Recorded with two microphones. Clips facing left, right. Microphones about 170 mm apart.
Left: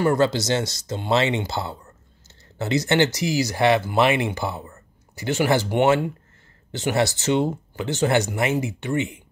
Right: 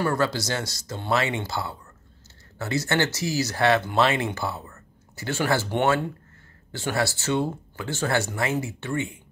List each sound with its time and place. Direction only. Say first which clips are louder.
0.0 s speech: left 5 dB; 20° left (ahead or behind)